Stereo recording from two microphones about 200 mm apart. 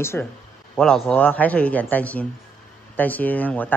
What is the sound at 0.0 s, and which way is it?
A man's voice, 10° left (ahead or behind).